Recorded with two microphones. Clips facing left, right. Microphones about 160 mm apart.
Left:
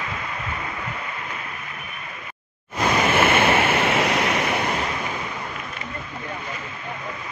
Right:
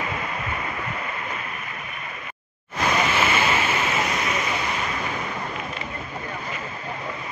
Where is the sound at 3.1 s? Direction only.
55° left (ahead or behind).